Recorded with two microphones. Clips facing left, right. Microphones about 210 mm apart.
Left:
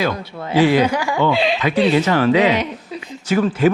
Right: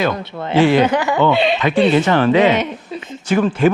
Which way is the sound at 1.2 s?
Centre (ahead or behind).